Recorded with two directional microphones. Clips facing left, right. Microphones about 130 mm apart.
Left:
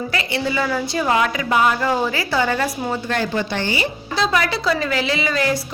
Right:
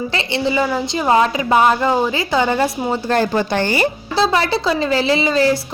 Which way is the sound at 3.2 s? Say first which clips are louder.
Right 5 dB; 45° right (ahead or behind).